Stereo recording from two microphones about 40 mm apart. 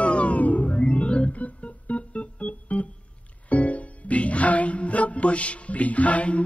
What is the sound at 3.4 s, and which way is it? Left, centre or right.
Music, left.